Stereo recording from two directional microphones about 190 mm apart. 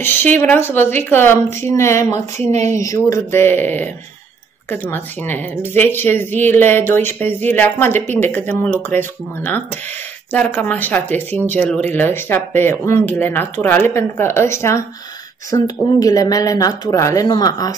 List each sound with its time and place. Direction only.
0.0 s speech: 10° left (ahead or behind)